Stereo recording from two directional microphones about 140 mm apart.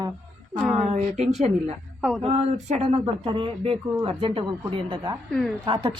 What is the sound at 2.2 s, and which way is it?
Speech, 50° right (ahead or behind).